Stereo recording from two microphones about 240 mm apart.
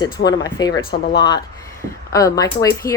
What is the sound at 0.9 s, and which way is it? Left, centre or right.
Speech, left.